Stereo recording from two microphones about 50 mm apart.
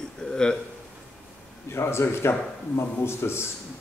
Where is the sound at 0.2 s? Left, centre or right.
Centre.